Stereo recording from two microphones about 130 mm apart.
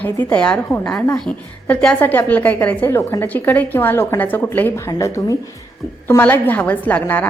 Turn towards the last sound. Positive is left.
turn(degrees=15)  # may be behind; listen again after turning